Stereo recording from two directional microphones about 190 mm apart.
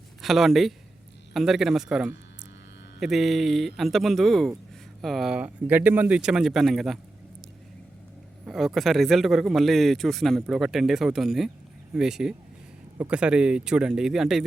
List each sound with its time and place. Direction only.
0.2 s speech: centre (ahead or behind)
8.4 s speech: centre (ahead or behind)